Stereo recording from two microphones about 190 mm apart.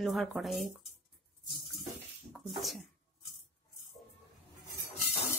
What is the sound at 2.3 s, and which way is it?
Speech, centre (ahead or behind).